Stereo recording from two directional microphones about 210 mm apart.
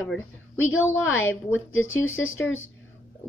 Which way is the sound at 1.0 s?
70° left (ahead or behind).